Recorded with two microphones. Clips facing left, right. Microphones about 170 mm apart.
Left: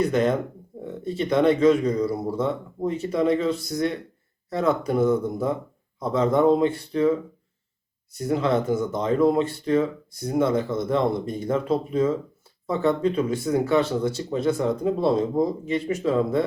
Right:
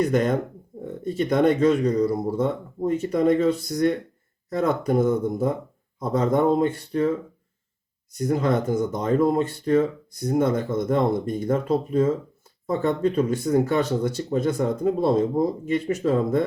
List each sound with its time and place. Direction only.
0.0 s speech: 45° right (ahead or behind)
8.1 s speech: 45° right (ahead or behind)